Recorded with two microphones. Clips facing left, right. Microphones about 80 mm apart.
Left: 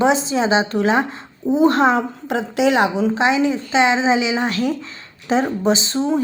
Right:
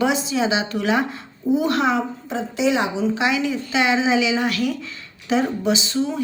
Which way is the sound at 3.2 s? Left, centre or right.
Left.